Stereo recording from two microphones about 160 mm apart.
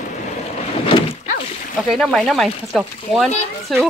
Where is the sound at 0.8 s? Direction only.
35° left (ahead or behind).